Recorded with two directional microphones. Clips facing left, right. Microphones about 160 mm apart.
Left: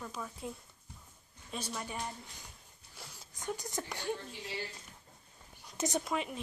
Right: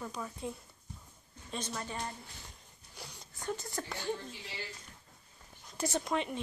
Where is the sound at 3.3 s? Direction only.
15° left (ahead or behind).